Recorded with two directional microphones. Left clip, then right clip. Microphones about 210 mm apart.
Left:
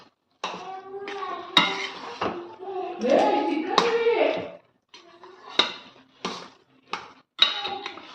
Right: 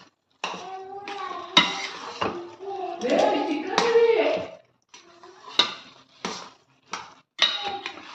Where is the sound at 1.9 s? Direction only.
Centre (ahead or behind).